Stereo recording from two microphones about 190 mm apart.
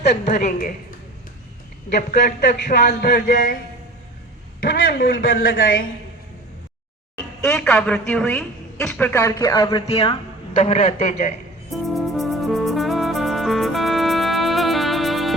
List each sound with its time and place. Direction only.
0.3 s a man's voice: 40° left (ahead or behind)
1.9 s speech: 45° left (ahead or behind)
4.9 s speech: 50° left (ahead or behind)
7.4 s a woman's voice: 5° left (ahead or behind); by 9.8 s 20° left (ahead or behind)
9.9 s a man's voice: 35° left (ahead or behind)
11.7 s music: centre (ahead or behind)